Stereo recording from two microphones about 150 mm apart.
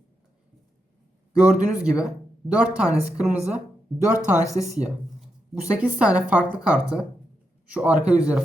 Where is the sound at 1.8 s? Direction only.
5° right (ahead or behind).